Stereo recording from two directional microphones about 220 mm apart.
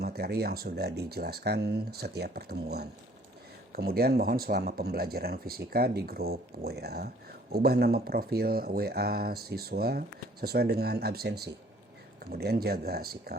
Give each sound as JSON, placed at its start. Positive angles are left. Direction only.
{"t": 0.0, "sound": "speech", "side_deg": -45}